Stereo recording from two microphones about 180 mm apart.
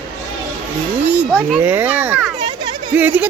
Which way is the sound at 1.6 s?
10° right (ahead or behind).